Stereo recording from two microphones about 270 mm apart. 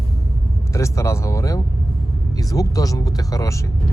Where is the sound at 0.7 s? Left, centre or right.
Centre.